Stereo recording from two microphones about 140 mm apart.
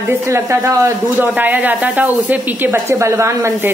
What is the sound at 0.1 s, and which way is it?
A woman's voice, 20° right (ahead or behind).